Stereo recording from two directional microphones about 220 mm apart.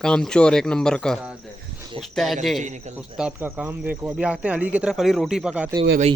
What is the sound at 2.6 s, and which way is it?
Speech, 30° right (ahead or behind).